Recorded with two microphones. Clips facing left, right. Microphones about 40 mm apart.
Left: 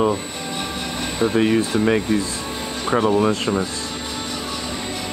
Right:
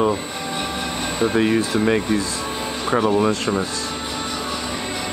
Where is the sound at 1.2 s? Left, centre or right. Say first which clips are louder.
Left 1 dB; centre.